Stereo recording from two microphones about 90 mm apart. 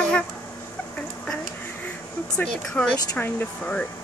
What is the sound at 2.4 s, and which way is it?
Speech, 10° left (ahead or behind).